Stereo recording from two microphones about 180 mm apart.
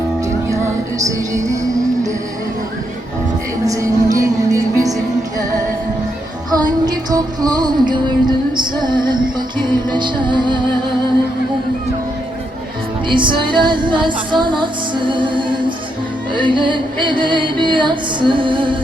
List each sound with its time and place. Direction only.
0.4 s music: 15° right (ahead or behind)
3.7 s music: 20° right (ahead or behind)
6.5 s music: 20° right (ahead or behind)
13.1 s music: 25° right (ahead or behind)